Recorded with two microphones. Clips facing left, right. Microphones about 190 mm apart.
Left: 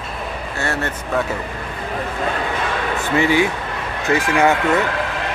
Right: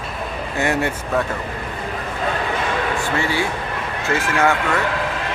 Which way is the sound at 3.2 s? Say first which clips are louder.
Left 5 dB; 15° left (ahead or behind).